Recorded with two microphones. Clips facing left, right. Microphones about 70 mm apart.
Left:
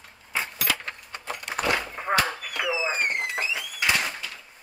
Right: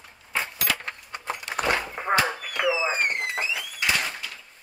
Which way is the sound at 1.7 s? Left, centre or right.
Centre.